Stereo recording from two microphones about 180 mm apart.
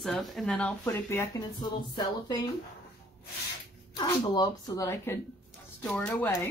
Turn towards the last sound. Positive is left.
turn(degrees=10)  # may be behind; listen again after turning